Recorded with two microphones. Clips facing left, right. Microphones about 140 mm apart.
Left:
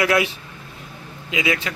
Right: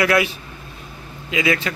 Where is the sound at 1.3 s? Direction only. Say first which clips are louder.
Right 3 dB; 15° left (ahead or behind).